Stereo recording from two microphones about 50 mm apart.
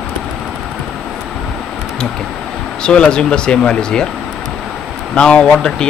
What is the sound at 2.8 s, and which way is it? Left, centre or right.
Speech, centre.